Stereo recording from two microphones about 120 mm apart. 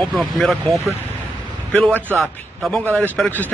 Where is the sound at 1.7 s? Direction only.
15° left (ahead or behind).